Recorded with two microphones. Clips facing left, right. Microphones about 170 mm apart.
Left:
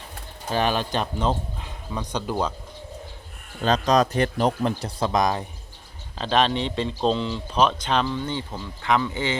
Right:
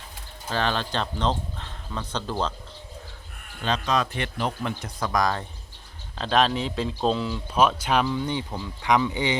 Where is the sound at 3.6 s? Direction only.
40° left (ahead or behind); by 5.5 s 20° left (ahead or behind).